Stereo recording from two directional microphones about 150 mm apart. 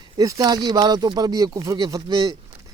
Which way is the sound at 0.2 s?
25° right (ahead or behind).